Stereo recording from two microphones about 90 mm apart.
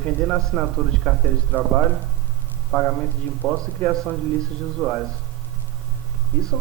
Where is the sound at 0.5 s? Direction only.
10° right (ahead or behind).